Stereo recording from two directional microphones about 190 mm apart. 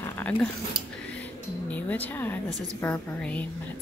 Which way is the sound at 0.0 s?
10° left (ahead or behind).